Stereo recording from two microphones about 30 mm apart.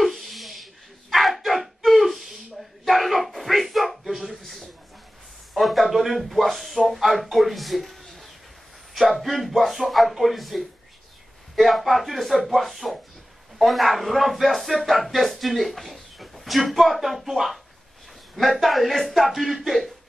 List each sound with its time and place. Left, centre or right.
0.0 s a sound: centre
1.1 s dog: centre
4.4 s a man's voice: centre